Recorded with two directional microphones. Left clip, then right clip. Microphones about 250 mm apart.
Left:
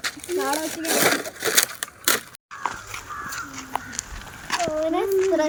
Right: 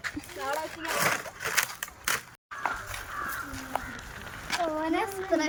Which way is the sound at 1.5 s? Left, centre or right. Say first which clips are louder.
Left 6 dB; left.